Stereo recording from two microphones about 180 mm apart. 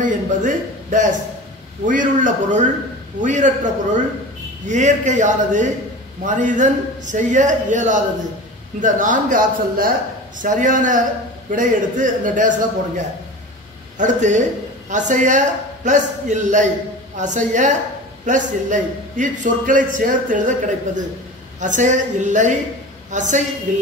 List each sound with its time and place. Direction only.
0.0 s a man's voice: 45° right (ahead or behind)